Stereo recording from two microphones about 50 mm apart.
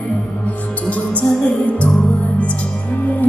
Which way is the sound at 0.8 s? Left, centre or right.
Left.